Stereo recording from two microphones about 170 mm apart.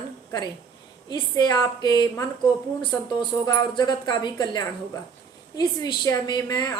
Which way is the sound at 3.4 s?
25° left (ahead or behind).